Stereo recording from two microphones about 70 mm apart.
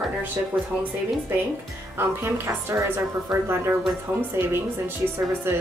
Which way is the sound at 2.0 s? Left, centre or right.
Right.